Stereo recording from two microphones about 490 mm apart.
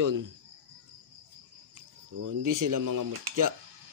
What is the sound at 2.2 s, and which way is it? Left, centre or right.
Speech, right.